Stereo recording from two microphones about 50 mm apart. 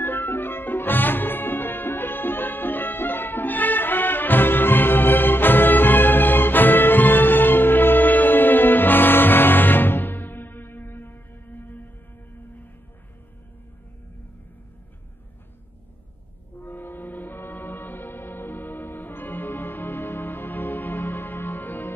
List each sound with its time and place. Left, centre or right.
0.0 s music: left
16.5 s music: left